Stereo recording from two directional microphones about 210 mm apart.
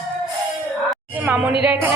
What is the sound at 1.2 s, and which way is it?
Speech, 10° right (ahead or behind).